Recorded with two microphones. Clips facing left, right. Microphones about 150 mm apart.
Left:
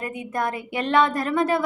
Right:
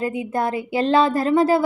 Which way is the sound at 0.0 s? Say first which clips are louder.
Right 4 dB; 25° right (ahead or behind).